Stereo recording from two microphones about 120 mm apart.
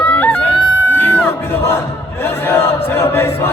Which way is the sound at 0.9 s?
20° left (ahead or behind).